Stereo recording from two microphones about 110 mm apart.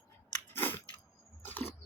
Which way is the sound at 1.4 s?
15° left (ahead or behind).